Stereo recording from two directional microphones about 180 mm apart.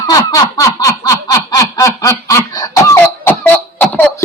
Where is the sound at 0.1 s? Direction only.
20° left (ahead or behind).